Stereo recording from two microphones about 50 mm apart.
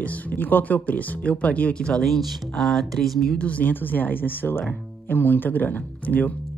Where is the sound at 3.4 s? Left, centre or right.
Left.